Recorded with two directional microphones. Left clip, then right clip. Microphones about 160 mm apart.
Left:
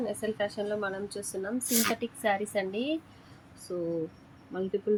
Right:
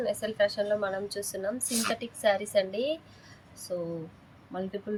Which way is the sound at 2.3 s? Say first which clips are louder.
Even; 65° right (ahead or behind).